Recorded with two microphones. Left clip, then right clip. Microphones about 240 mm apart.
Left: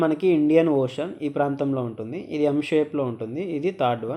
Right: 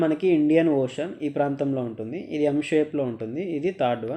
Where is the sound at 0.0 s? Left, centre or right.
Centre.